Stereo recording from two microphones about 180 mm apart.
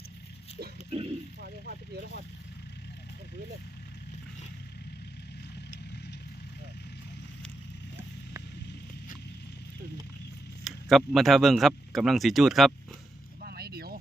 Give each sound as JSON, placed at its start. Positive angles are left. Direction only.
{"t": 0.9, "sound": "frying", "side_deg": -35}
{"t": 1.4, "sound": "vehicle", "side_deg": -55}
{"t": 10.6, "sound": "speech", "side_deg": 0}
{"t": 13.4, "sound": "vehicle", "side_deg": -60}